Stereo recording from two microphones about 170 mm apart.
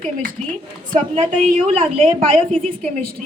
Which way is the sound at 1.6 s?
35° right (ahead or behind).